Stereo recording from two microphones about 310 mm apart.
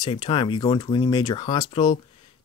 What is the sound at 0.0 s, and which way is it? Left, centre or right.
Speech, centre.